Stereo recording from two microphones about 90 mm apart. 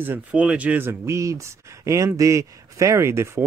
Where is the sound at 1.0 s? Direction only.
35° right (ahead or behind).